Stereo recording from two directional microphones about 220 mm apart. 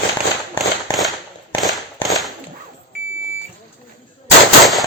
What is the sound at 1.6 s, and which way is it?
Firecracker, centre (ahead or behind).